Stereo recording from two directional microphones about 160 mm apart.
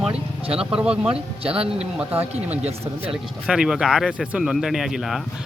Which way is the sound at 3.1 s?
5° right (ahead or behind).